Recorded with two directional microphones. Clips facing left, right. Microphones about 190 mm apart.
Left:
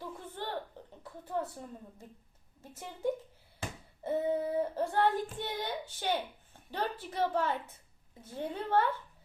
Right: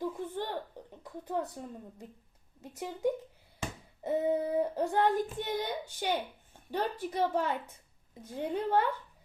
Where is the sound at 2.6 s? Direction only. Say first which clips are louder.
Right 5 dB; 15° right (ahead or behind).